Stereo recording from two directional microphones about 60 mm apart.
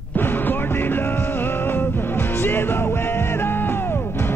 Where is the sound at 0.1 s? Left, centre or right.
Left.